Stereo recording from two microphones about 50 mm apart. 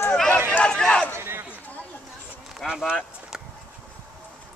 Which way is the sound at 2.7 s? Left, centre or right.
Centre.